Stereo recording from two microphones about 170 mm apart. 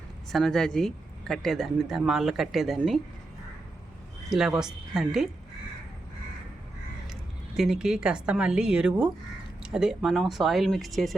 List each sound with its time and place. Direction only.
0.3 s speech: centre (ahead or behind)
4.3 s speech: 5° right (ahead or behind)
7.5 s speech: 5° right (ahead or behind)